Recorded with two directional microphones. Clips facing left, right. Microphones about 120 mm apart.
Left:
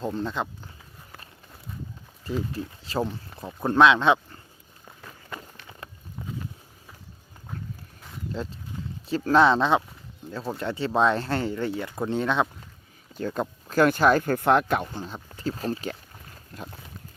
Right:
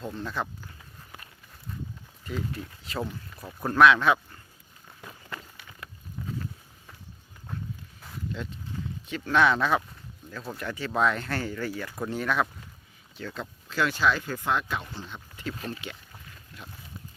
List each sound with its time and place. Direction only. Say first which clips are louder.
0.0 s speech: left 6 dB; 30° left (ahead or behind)
2.2 s speech: left 4 dB; 30° left (ahead or behind)
6.2 s a sound: even; 20° left (ahead or behind)
8.3 s speech: left 4 dB; 35° left (ahead or behind)
8.7 s a sound: even; 20° left (ahead or behind)
9.0 s speech: left 4 dB; 35° left (ahead or behind)
13.1 s speech: left 8 dB; 45° left (ahead or behind)
15.0 s boat: left 5 dB; 35° left (ahead or behind)